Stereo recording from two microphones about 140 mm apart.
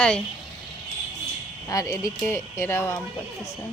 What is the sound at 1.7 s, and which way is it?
Speech, 25° left (ahead or behind).